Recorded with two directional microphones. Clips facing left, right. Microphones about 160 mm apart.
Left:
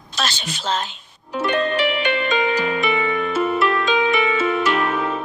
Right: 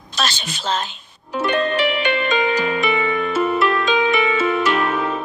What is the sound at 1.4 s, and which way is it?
Music, 90° right.